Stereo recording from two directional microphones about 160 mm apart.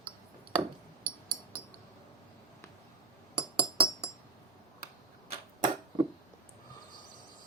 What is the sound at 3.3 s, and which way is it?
Glass, 30° right (ahead or behind).